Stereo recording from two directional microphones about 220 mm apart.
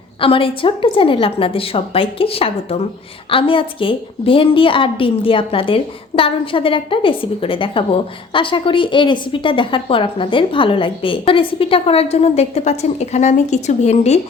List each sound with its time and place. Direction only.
0.2 s a woman's voice: 25° left (ahead or behind)